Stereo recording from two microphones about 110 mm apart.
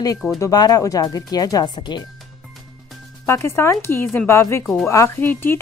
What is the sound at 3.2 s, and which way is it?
Speech, 25° left (ahead or behind).